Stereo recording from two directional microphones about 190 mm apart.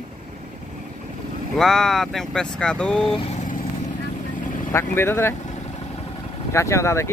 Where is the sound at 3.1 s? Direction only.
30° left (ahead or behind).